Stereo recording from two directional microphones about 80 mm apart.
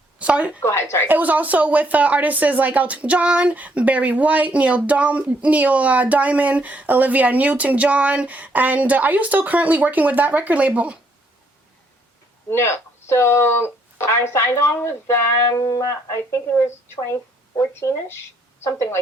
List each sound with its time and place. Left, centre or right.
0.2 s speech: centre
0.6 s speech: left
1.0 s speech: right
12.5 s speech: left